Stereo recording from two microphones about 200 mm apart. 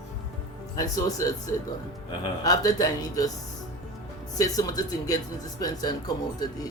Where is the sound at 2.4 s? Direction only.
15° left (ahead or behind).